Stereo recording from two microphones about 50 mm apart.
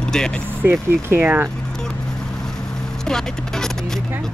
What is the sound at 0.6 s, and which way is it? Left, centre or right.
Speech, right.